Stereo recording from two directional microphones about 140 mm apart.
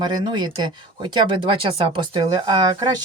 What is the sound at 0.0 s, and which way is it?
Speech, 30° right (ahead or behind).